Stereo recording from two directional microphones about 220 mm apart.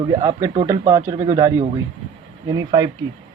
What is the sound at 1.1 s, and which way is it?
Speech, 25° right (ahead or behind).